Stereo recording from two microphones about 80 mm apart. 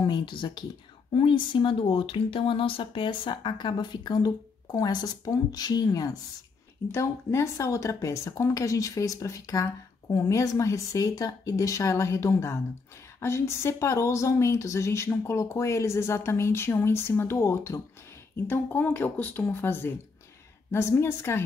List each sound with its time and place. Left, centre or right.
0.0 s speech: left
6.9 s speech: left
18.3 s speech: left